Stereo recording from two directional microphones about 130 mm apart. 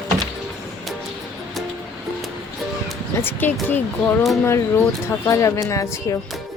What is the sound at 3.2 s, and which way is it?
Speech, 15° left (ahead or behind).